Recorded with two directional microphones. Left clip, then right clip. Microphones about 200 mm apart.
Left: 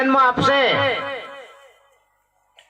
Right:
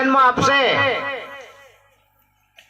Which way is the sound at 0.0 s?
25° right (ahead or behind).